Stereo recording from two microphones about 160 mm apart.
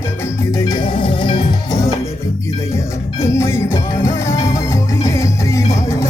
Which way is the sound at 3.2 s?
15° left (ahead or behind).